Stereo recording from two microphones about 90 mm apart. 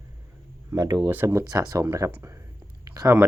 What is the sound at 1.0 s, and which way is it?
Speech, 20° right (ahead or behind).